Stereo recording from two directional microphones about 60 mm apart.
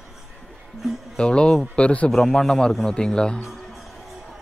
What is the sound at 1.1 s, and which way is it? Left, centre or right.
Speech, centre.